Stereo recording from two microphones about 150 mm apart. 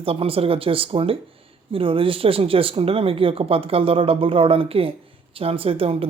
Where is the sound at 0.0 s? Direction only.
40° right (ahead or behind).